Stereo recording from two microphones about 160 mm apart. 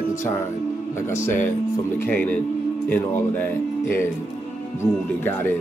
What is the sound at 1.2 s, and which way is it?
Speech, 15° left (ahead or behind).